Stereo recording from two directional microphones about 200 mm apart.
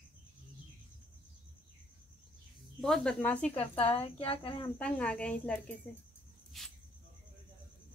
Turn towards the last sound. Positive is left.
turn(degrees=0)  # may be behind; listen again after turning